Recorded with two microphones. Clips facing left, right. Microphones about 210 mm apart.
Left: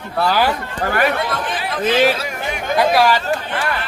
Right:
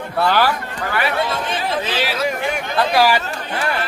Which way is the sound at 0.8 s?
45° left (ahead or behind).